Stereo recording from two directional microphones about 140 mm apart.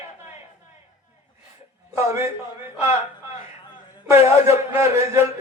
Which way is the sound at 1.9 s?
20° right (ahead or behind).